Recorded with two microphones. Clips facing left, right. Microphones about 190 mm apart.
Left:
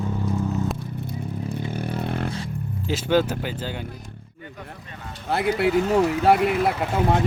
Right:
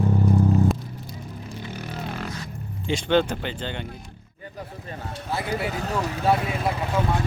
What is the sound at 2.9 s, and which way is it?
Speech, 5° left (ahead or behind).